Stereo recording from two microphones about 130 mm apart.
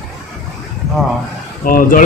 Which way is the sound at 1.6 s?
90° left.